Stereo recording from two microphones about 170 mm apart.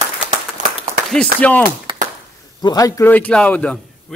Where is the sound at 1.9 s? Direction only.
30° right (ahead or behind).